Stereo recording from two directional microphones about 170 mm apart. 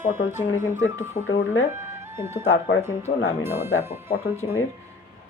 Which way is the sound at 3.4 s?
15° right (ahead or behind).